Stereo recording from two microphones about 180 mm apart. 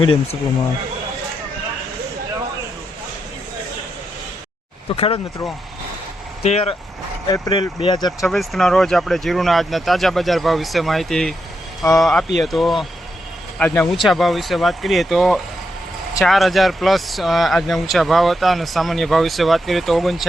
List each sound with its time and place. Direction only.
0.0 s speech: 30° left (ahead or behind)
4.9 s speech: 30° left (ahead or behind)
6.4 s speech: 35° left (ahead or behind)
7.3 s speech: 20° left (ahead or behind)
8.3 s speech: centre (ahead or behind)